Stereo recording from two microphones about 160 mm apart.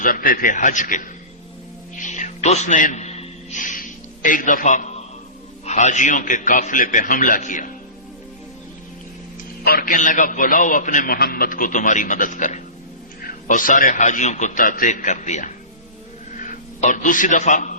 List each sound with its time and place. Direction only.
0.0 s a man's voice: 65° left (ahead or behind)
2.0 s music: 50° left (ahead or behind)
5.6 s a man's voice: 50° left (ahead or behind)
9.6 s a man's voice: 65° left (ahead or behind)
16.8 s a man's voice: 50° left (ahead or behind)